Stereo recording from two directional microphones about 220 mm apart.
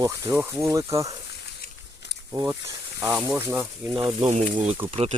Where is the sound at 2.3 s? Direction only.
15° right (ahead or behind).